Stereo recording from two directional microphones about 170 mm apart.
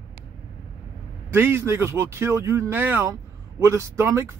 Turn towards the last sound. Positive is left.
turn(degrees=-15)  # may be behind; listen again after turning